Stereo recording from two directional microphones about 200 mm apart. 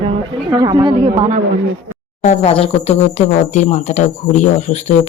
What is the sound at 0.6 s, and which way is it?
Speech, 20° right (ahead or behind).